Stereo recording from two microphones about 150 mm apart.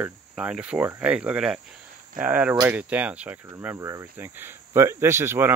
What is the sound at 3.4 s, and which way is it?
Speech, 20° right (ahead or behind).